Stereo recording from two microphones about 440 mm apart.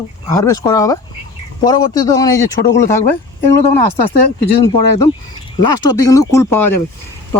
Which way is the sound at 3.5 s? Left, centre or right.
Left.